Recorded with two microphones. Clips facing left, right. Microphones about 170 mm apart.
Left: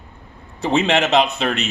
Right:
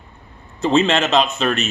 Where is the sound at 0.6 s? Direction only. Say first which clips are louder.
Right 1 dB; 15° left (ahead or behind).